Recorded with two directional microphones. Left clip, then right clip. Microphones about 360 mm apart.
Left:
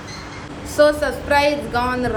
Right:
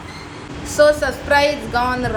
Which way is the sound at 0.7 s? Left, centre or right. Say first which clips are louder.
Right 2 dB; centre.